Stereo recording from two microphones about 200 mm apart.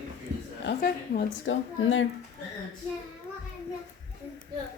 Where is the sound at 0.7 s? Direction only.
50° left (ahead or behind).